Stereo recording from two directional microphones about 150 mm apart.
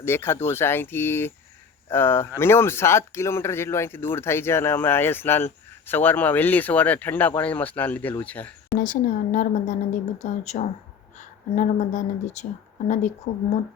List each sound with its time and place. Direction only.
0.0 s speech: 15° left (ahead or behind)
8.8 s speech: 60° left (ahead or behind)